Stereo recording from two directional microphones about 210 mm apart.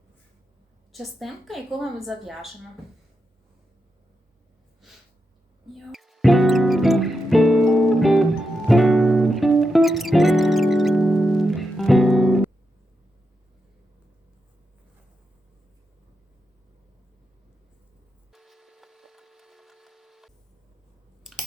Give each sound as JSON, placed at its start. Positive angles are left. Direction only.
{"t": 0.9, "sound": "a woman's voice", "side_deg": 0}
{"t": 5.7, "sound": "music", "side_deg": 0}
{"t": 18.3, "sound": "splinter", "side_deg": 0}
{"t": 21.2, "sound": "a sound", "side_deg": 0}